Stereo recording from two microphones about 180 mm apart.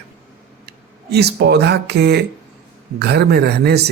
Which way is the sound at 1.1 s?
65° right (ahead or behind).